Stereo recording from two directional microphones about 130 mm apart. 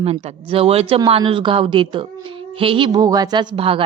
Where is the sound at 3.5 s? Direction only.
45° right (ahead or behind).